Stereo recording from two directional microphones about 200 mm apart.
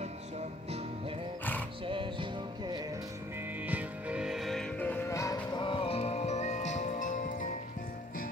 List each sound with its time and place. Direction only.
0.0 s music: 35° right (ahead or behind)
1.9 s music: 25° right (ahead or behind)
3.6 s music: 5° right (ahead or behind); by 7.4 s 40° left (ahead or behind)